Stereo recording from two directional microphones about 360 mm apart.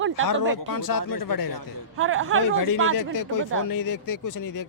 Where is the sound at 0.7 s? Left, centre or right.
Left.